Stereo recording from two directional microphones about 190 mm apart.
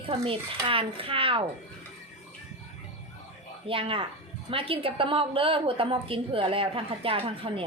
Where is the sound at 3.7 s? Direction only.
30° right (ahead or behind).